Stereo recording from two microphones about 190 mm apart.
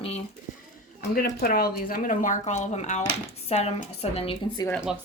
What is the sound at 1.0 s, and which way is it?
A woman's voice, 55° left (ahead or behind).